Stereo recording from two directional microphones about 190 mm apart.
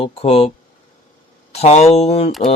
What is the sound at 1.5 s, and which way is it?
Speech, 35° left (ahead or behind).